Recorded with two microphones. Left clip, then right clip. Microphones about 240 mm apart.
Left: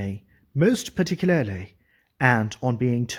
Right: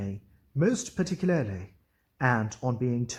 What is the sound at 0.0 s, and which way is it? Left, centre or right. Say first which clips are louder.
Speech: left 5 dB; left.